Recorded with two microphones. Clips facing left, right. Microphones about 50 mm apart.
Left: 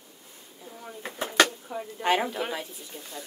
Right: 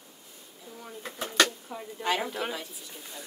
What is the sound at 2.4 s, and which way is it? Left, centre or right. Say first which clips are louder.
Speech: left 2 dB; centre.